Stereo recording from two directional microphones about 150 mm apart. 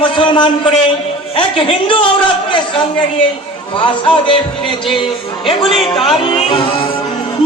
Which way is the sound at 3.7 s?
35° left (ahead or behind).